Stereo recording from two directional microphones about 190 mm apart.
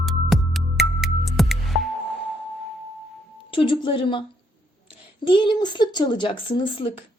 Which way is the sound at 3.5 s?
25° left (ahead or behind).